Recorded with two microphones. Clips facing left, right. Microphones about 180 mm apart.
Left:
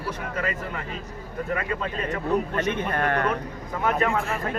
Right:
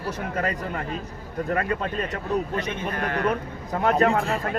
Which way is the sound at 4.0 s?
35° right (ahead or behind).